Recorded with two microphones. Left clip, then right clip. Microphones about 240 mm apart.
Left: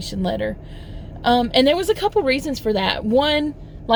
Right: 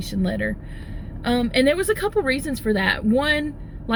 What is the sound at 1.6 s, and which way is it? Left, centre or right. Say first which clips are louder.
Speech: left 2 dB; left.